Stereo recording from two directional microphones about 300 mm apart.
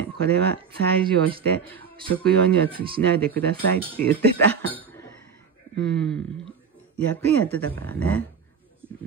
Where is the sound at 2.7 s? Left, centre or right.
Centre.